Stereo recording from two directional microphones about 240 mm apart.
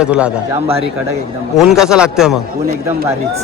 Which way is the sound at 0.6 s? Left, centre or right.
Right.